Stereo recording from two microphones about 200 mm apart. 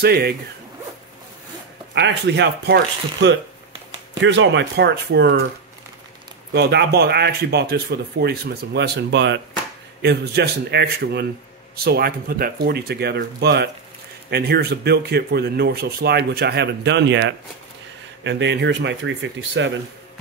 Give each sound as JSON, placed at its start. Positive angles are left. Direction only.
{"t": 0.0, "sound": "speech", "side_deg": -50}
{"t": 2.0, "sound": "speech", "side_deg": -60}
{"t": 6.5, "sound": "speech", "side_deg": -55}